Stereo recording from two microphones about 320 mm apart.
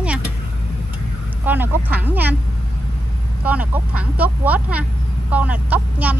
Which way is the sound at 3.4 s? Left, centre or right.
Centre.